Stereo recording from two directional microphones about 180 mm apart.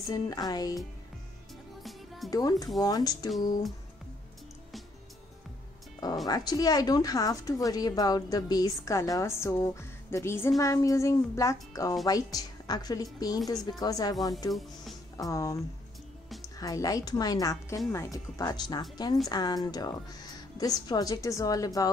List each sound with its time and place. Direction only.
0.1 s a woman's voice: 20° left (ahead or behind)
1.8 s music: centre (ahead or behind)
2.8 s a woman's voice: 20° left (ahead or behind)
6.2 s a woman's voice: 20° left (ahead or behind)
15.1 s a woman's voice: 20° left (ahead or behind)